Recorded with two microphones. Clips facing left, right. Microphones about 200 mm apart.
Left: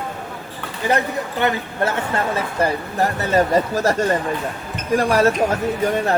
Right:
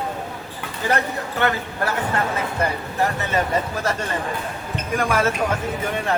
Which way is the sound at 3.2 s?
40° left (ahead or behind).